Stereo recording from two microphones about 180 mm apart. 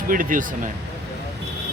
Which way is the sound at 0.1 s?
50° right (ahead or behind).